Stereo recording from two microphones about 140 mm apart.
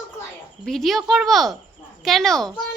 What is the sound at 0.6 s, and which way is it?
A woman's voice, centre (ahead or behind).